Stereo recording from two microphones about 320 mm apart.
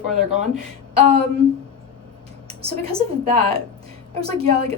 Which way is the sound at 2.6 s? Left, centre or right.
Centre.